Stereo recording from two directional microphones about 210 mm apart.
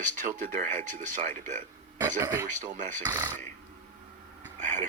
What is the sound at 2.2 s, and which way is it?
Speech, 15° right (ahead or behind).